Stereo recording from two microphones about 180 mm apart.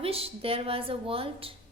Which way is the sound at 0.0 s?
35° right (ahead or behind).